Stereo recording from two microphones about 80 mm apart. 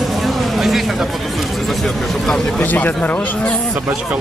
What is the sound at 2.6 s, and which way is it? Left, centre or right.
Speech, left.